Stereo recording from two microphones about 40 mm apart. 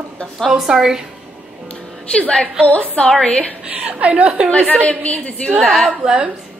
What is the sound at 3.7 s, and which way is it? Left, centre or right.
Speech, right.